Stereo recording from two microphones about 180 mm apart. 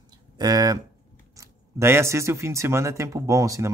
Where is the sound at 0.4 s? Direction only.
20° right (ahead or behind).